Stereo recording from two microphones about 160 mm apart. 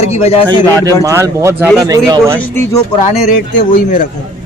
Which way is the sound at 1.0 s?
15° right (ahead or behind).